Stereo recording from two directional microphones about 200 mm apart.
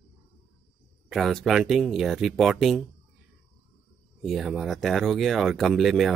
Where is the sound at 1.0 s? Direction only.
Centre (ahead or behind).